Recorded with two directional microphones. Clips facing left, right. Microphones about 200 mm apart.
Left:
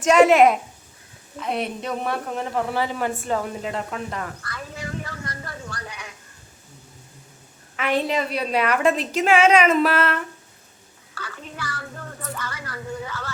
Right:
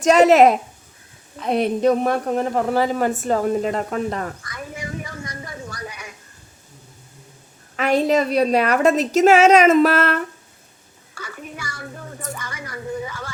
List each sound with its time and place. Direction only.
0.0 s speech: 40° right (ahead or behind)
4.4 s a sound: 15° right (ahead or behind)
7.8 s speech: 40° right (ahead or behind)
11.1 s a woman's voice: 10° right (ahead or behind)